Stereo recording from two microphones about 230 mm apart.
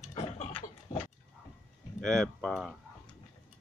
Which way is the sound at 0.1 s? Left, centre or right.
Left.